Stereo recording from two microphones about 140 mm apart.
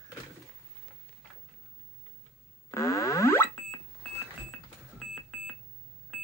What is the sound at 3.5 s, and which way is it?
Alarm clock, 10° left (ahead or behind).